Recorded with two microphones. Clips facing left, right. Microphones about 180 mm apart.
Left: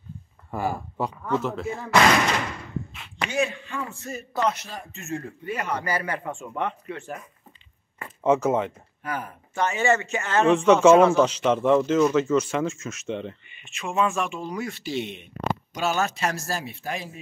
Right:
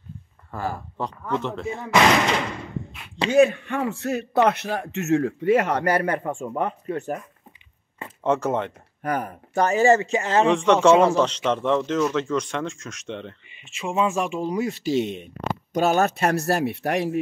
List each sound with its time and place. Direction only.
0.5 s speech: 10° left (ahead or behind)
3.3 s speech: 55° right (ahead or behind)
8.2 s speech: 5° left (ahead or behind)
9.0 s speech: 45° right (ahead or behind); by 10.5 s 30° right (ahead or behind)
10.5 s speech: 5° left (ahead or behind)
13.9 s speech: 20° right (ahead or behind)
14.2 s speech: 30° right (ahead or behind); by 17.2 s 70° right (ahead or behind)